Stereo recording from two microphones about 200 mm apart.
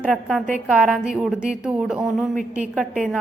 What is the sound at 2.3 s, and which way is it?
Speech, 40° right (ahead or behind).